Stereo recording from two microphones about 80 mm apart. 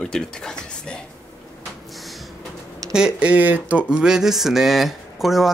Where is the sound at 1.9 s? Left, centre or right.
Centre.